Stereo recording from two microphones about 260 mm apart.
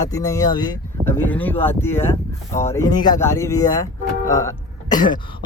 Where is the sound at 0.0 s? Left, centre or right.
Centre.